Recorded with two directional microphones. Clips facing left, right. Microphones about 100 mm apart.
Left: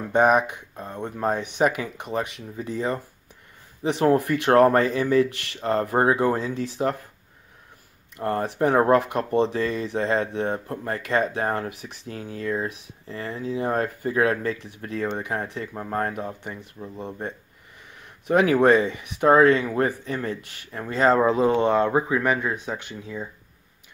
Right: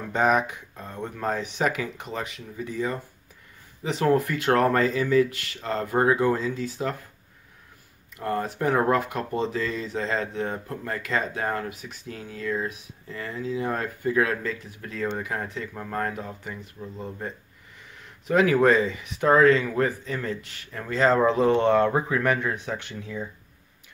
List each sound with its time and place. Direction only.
0.1 s speech: 20° left (ahead or behind)
8.2 s speech: 30° left (ahead or behind)
13.1 s speech: 25° left (ahead or behind)